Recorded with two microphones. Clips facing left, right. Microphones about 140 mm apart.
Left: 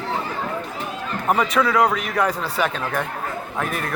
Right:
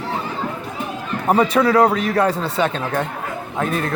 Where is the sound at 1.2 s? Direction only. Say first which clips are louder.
Right 4 dB; 30° right (ahead or behind).